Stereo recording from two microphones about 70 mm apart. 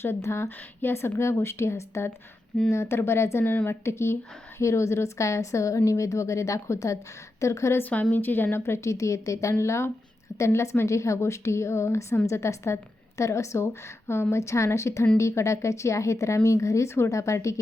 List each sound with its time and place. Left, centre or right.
0.0 s a woman's voice: left
3.8 s a woman's voice: left
7.8 s a woman's voice: left